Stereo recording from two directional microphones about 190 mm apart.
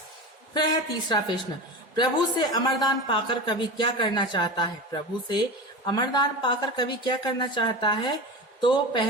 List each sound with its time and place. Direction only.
0.5 s speech: 25° left (ahead or behind)